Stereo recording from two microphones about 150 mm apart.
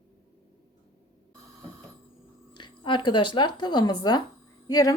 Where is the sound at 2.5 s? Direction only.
30° left (ahead or behind).